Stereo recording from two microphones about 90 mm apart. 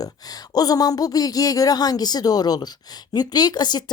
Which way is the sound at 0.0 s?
45° left (ahead or behind).